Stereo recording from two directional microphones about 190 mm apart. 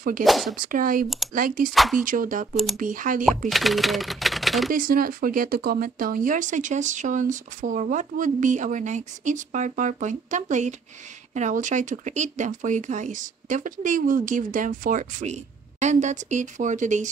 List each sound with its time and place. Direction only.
0.2 s speech: centre (ahead or behind)
0.6 s speech: 45° right (ahead or behind)
1.0 s speech: centre (ahead or behind)
1.3 s speech: 45° right (ahead or behind)
1.7 s speech: centre (ahead or behind)
2.0 s speech: 45° right (ahead or behind)
2.5 s speech: centre (ahead or behind)
2.8 s speech: 45° right (ahead or behind)
3.4 s speech: centre (ahead or behind)
4.7 s speech: 50° right (ahead or behind)